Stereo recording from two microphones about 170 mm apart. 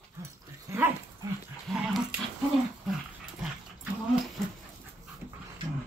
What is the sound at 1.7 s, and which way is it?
Dog, centre (ahead or behind).